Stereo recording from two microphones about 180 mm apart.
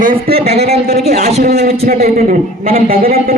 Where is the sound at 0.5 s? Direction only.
35° right (ahead or behind).